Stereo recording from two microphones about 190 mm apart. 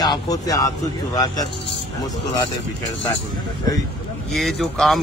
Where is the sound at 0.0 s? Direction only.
20° left (ahead or behind).